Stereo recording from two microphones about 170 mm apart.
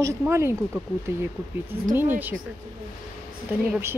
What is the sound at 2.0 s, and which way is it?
Speech, 10° right (ahead or behind).